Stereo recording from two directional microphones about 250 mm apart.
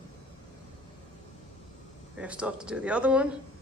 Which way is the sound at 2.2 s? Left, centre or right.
Centre.